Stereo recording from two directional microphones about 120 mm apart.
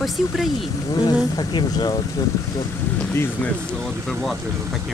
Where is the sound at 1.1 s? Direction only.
35° left (ahead or behind).